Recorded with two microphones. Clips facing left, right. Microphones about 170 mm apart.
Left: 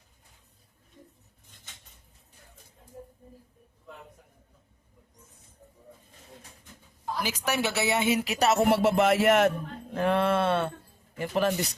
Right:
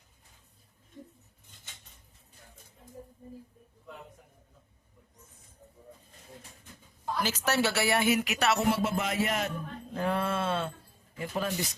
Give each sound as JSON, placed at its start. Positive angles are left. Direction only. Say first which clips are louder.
{"t": 7.2, "sound": "speech", "louder": "right 1 dB", "side_deg": 10}
{"t": 8.6, "sound": "speech", "louder": "left 7 dB", "side_deg": 70}
{"t": 9.9, "sound": "speech", "louder": "left 6 dB", "side_deg": 70}